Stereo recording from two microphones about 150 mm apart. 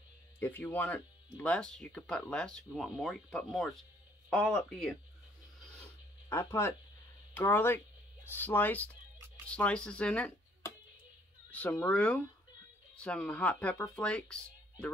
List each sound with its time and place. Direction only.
0.4 s speech: 10° left (ahead or behind)
6.2 s speech: 20° left (ahead or behind)